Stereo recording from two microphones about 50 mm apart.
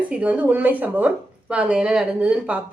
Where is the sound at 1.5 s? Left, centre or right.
Right.